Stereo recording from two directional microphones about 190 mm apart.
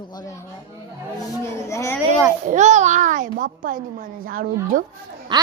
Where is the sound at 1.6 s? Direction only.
15° left (ahead or behind).